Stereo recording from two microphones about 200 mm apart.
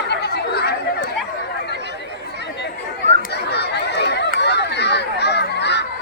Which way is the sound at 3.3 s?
55° left (ahead or behind).